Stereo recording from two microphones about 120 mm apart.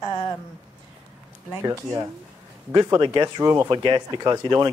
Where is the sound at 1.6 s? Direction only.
30° right (ahead or behind).